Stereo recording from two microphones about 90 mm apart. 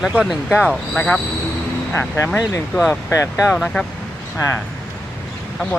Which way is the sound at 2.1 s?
30° left (ahead or behind).